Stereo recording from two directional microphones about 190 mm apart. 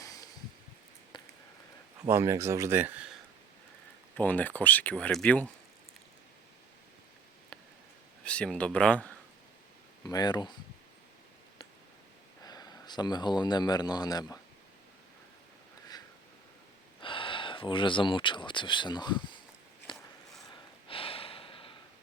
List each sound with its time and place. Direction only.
0.0 s a sound: 20° left (ahead or behind)
2.0 s speech: 15° right (ahead or behind)
4.2 s speech: 10° left (ahead or behind)
8.2 s speech: 5° left (ahead or behind)
10.1 s speech: 20° left (ahead or behind)
12.5 s a man's voice: 20° left (ahead or behind)
17.0 s speech: 25° left (ahead or behind)
19.9 s a sound: 25° left (ahead or behind)
20.5 s snort: 30° left (ahead or behind)